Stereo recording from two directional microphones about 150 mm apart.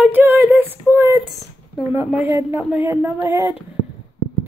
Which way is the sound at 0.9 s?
15° right (ahead or behind).